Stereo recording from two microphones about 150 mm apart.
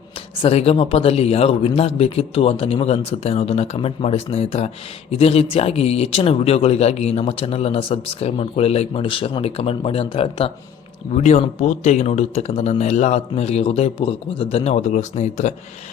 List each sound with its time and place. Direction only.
0.4 s speech: 40° left (ahead or behind)